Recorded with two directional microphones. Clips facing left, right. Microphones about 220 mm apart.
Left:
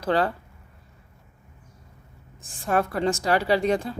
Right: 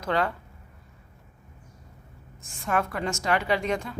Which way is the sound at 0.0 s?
35° left (ahead or behind).